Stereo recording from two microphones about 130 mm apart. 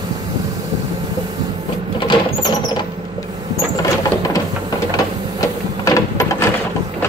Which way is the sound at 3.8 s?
25° left (ahead or behind).